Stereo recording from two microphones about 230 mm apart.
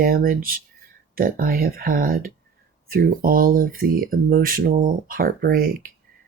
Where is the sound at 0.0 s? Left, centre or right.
Right.